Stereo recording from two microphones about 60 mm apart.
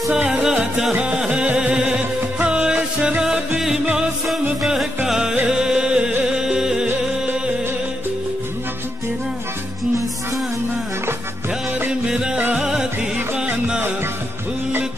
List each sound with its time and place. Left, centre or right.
0.1 s music: centre
11.9 s music: centre